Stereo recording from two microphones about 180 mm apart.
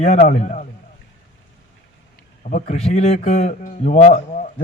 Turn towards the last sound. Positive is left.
turn(degrees=40)  # may be behind; listen again after turning